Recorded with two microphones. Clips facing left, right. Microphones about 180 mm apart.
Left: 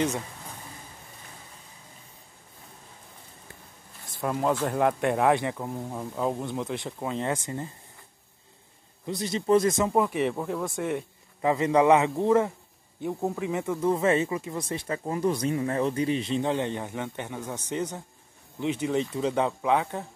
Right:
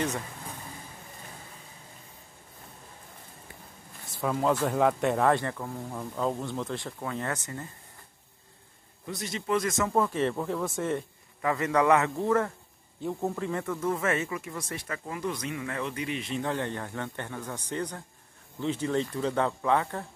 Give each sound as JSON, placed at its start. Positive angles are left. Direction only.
{"t": 4.2, "sound": "speech", "side_deg": 5}
{"t": 5.4, "sound": "speech", "side_deg": 15}
{"t": 9.0, "sound": "speech", "side_deg": 30}
{"t": 9.8, "sound": "speech", "side_deg": 15}
{"t": 11.4, "sound": "speech", "side_deg": 25}
{"t": 13.8, "sound": "speech", "side_deg": 30}
{"t": 16.5, "sound": "speech", "side_deg": 15}